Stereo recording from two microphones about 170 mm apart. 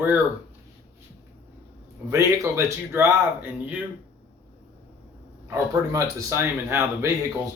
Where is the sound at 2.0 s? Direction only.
15° right (ahead or behind).